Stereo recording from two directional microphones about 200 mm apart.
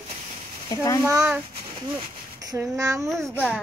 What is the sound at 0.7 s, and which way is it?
Speech, 15° left (ahead or behind).